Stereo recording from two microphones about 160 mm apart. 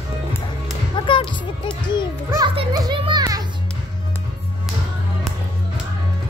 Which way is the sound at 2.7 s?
25° right (ahead or behind).